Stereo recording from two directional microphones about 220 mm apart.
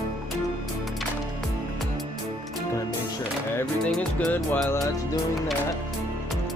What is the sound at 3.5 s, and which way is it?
Music, 5° left (ahead or behind).